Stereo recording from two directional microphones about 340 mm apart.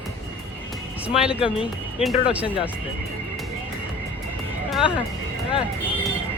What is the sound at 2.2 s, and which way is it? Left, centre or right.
Speech, centre.